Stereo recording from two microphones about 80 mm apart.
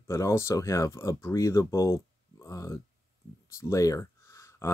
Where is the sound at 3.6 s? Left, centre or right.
Left.